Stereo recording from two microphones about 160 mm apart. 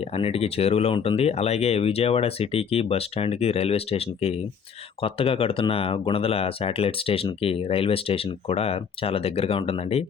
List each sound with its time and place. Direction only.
0.2 s speech: 40° left (ahead or behind)